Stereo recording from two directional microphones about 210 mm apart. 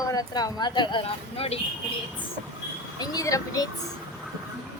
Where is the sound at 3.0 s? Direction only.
15° left (ahead or behind).